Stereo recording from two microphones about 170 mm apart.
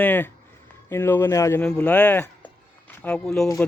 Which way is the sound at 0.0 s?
10° left (ahead or behind).